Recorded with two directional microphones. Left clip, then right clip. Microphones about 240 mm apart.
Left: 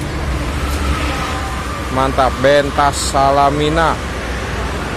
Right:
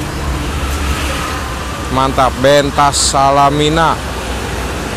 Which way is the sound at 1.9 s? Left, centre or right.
Centre.